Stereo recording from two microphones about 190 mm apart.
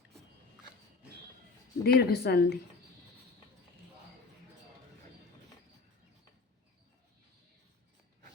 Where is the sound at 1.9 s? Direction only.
55° left (ahead or behind).